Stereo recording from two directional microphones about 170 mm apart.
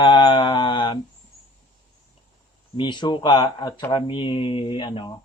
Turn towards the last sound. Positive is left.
turn(degrees=30)  # may be behind; listen again after turning